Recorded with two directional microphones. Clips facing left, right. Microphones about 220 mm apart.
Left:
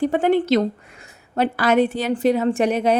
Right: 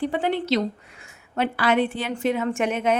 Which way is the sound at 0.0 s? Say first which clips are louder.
Left 6 dB; 45° left (ahead or behind).